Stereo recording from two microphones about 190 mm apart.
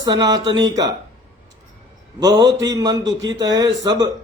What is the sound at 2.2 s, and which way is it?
Speech, 20° right (ahead or behind).